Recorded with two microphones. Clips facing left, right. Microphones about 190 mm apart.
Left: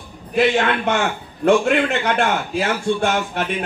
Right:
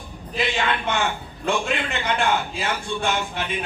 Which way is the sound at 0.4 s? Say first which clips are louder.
Left 7 dB; 70° left (ahead or behind).